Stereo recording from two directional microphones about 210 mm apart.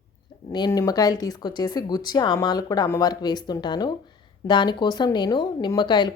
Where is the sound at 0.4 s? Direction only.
20° left (ahead or behind).